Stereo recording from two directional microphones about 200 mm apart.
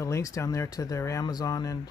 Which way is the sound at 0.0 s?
15° left (ahead or behind).